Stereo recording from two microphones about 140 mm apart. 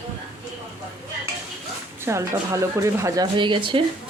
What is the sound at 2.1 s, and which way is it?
Speech, 20° right (ahead or behind).